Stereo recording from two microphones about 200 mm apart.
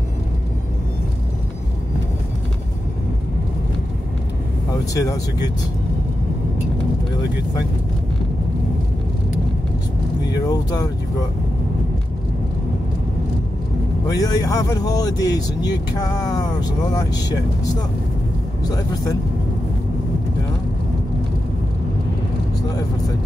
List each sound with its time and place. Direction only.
4.9 s speech: 15° left (ahead or behind)
10.5 s speech: 20° left (ahead or behind)
14.0 s speech: 20° left (ahead or behind)
18.6 s speech: 20° left (ahead or behind)